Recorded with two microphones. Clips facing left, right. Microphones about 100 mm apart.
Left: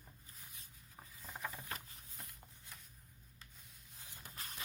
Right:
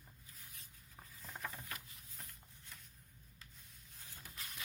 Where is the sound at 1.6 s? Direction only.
35° left (ahead or behind).